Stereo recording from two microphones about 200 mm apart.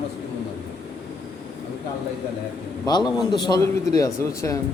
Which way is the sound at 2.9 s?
20° left (ahead or behind).